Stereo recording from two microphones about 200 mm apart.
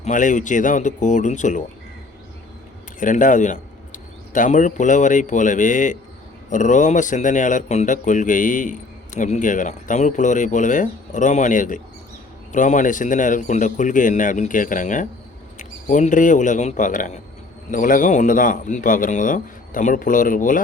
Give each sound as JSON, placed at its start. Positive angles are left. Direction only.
{"t": 0.0, "sound": "speech", "side_deg": 40}
{"t": 3.0, "sound": "speech", "side_deg": 40}